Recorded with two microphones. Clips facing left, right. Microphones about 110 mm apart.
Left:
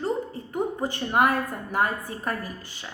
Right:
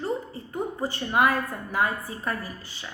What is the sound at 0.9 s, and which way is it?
A woman's voice, 50° left (ahead or behind).